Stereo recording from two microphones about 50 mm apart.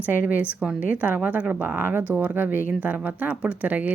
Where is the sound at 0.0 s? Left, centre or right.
Right.